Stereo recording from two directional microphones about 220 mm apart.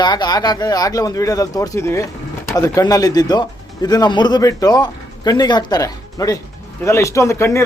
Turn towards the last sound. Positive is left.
turn(degrees=10)  # may be behind; listen again after turning